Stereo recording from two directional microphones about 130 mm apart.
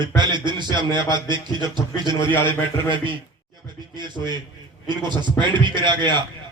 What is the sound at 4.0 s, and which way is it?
A man's voice, 35° right (ahead or behind).